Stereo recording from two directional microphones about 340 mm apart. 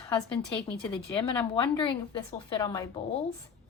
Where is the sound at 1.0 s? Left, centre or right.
Centre.